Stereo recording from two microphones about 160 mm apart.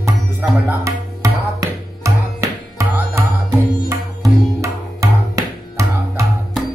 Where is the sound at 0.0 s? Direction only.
15° right (ahead or behind).